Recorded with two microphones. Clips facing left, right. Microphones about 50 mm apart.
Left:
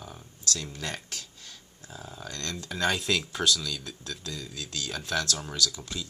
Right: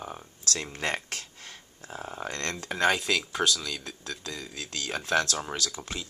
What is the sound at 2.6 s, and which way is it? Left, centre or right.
Speech, right.